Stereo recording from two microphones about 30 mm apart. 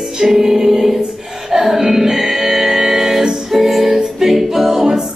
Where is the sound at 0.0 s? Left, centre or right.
Centre.